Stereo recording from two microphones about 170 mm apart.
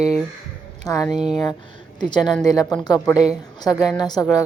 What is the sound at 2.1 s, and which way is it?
Speech, 25° left (ahead or behind).